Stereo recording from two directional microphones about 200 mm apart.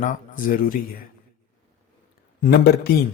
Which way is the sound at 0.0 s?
40° left (ahead or behind).